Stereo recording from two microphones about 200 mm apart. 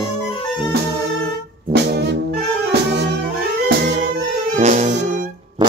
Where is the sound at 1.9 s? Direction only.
55° right (ahead or behind).